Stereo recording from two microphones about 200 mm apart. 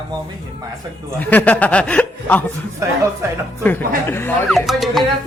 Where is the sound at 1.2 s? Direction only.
10° left (ahead or behind).